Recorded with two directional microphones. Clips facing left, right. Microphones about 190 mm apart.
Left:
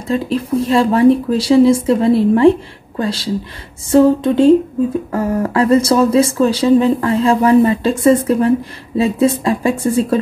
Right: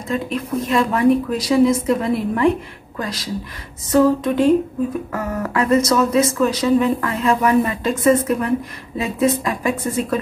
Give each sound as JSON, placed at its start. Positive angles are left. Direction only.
{"t": 0.1, "sound": "speech", "side_deg": 30}